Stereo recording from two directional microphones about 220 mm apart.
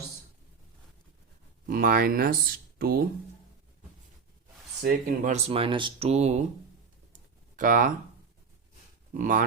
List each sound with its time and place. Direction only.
1.6 s speech: 40° right (ahead or behind)
4.8 s speech: 45° right (ahead or behind)
7.1 s a sound: 35° right (ahead or behind)
9.1 s speech: 35° right (ahead or behind)